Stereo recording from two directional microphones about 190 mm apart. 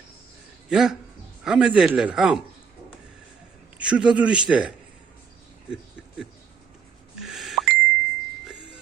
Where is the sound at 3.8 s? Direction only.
5° right (ahead or behind).